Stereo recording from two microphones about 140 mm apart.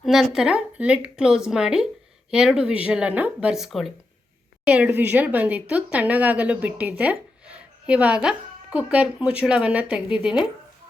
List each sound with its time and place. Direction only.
0.0 s speech: 5° right (ahead or behind)